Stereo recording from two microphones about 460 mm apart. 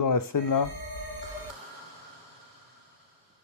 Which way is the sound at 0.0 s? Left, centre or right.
Left.